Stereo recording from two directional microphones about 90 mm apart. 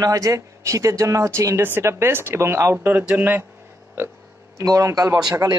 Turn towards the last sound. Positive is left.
turn(degrees=-45)  # may be behind; listen again after turning